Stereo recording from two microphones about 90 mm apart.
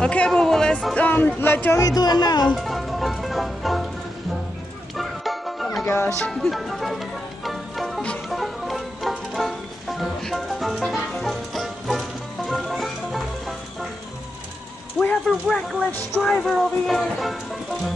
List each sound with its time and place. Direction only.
0.0 s speech: 10° left (ahead or behind)
1.8 s speech: 45° left (ahead or behind)
2.4 s music: centre (ahead or behind)
4.9 s music: centre (ahead or behind)
5.9 s speech: 30° left (ahead or behind)
6.3 s music: centre (ahead or behind)
15.0 s a sound: 10° left (ahead or behind)
15.4 s speech: centre (ahead or behind)